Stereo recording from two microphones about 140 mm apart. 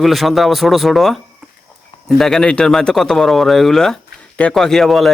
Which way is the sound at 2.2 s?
5° left (ahead or behind).